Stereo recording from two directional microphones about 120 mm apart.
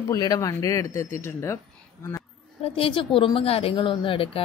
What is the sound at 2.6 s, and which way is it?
Speech, 50° left (ahead or behind).